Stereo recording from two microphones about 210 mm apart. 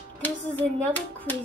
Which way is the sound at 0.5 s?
10° left (ahead or behind).